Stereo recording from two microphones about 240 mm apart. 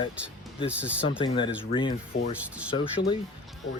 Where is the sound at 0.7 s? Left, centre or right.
Centre.